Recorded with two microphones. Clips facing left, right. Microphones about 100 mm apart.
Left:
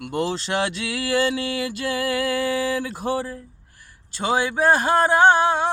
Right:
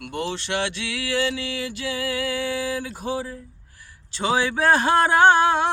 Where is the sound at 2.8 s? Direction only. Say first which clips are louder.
Left 3 dB; 65° left (ahead or behind).